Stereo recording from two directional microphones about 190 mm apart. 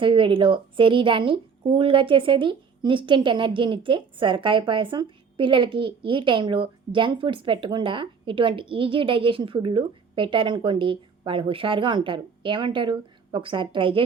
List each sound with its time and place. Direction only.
0.0 s speech: 25° right (ahead or behind)